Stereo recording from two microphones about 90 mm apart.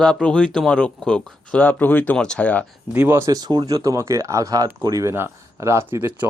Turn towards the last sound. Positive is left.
turn(degrees=-20)  # may be behind; listen again after turning